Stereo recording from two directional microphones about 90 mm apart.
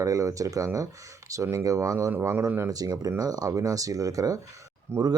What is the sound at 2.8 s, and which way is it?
Speech, 40° right (ahead or behind).